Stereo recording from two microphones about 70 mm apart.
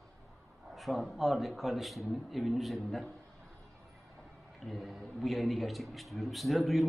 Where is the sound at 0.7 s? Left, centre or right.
Centre.